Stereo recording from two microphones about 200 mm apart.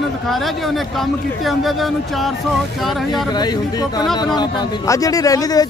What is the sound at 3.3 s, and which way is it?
Speech, 20° left (ahead or behind).